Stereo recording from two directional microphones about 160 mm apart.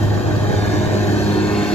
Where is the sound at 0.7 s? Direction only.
40° left (ahead or behind).